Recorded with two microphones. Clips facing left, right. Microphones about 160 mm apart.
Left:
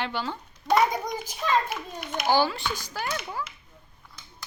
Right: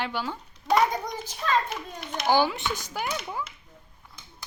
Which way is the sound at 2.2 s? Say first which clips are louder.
Right 1 dB; 15° right (ahead or behind).